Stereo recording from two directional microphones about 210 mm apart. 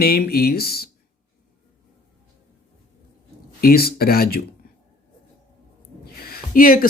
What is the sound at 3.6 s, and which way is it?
Speech, 45° left (ahead or behind).